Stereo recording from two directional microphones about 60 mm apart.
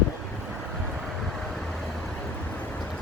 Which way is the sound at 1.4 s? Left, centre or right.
Centre.